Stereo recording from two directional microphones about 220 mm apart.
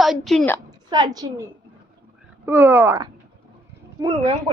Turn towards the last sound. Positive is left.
turn(degrees=-20)  # may be behind; listen again after turning